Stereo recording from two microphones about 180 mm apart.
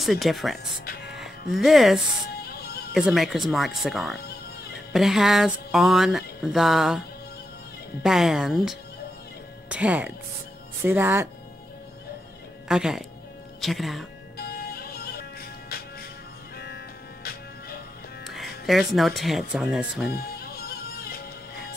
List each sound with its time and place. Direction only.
0.0 s a sound: centre (ahead or behind)
1.0 s music: centre (ahead or behind)
2.4 s music: 60° left (ahead or behind)
2.9 s a sound: centre (ahead or behind)
8.0 s a sound: 5° right (ahead or behind)
9.7 s speech: 5° right (ahead or behind)
12.6 s speech: 5° right (ahead or behind)
13.6 s a sound: centre (ahead or behind)
14.4 s music: 60° left (ahead or behind)
16.5 s music: 65° left (ahead or behind)
18.2 s speech: centre (ahead or behind)
20.1 s music: 60° left (ahead or behind)